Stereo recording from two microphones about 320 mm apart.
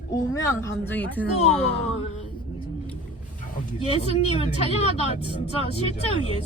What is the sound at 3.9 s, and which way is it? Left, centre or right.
Speech, centre.